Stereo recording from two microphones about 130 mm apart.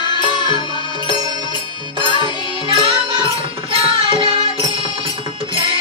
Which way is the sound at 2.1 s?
40° right (ahead or behind).